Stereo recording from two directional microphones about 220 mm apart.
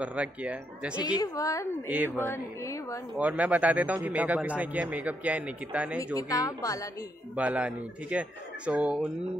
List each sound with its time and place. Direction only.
0.0 s speech: 5° right (ahead or behind)
1.0 s a woman's voice: 15° left (ahead or behind)
1.9 s speech: 5° right (ahead or behind)
2.1 s a woman's voice: 10° left (ahead or behind)
3.2 s speech: 5° right (ahead or behind)
6.1 s a woman's voice: 15° left (ahead or behind)
7.3 s speech: 5° right (ahead or behind)